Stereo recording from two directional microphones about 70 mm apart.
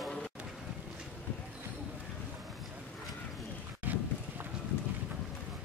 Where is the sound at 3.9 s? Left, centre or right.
Right.